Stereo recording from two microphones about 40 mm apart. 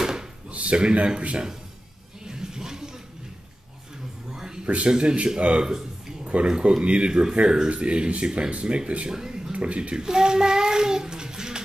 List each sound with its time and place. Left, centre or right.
0.0 s drawer open or close: centre
0.5 s speech: right
2.2 s a sound: centre
4.3 s a sound: centre
4.8 s speech: right
5.4 s a sound: right
6.4 s speech: right
9.1 s speech: centre
9.5 s speech: right
9.9 s child singing: centre